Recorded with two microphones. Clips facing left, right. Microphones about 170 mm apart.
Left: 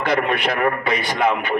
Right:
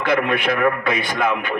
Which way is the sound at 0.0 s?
55° right (ahead or behind).